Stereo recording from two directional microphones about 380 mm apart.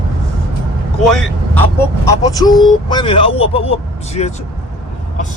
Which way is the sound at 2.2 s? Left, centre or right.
Centre.